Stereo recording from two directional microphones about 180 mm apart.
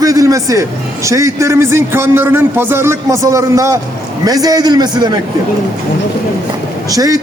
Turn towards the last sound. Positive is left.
turn(degrees=-20)  # may be behind; listen again after turning